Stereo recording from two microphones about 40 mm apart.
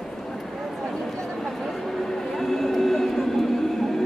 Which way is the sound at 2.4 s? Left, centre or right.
Centre.